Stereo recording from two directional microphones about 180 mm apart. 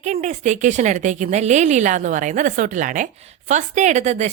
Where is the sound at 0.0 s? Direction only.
40° right (ahead or behind).